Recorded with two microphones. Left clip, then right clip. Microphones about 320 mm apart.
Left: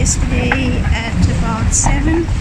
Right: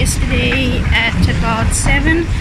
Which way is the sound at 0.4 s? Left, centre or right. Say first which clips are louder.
Right 2 dB; centre.